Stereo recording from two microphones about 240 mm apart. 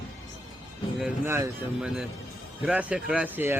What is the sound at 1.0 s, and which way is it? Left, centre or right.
Speech, centre.